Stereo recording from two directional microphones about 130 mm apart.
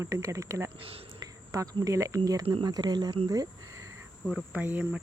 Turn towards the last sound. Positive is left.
turn(degrees=-15)  # may be behind; listen again after turning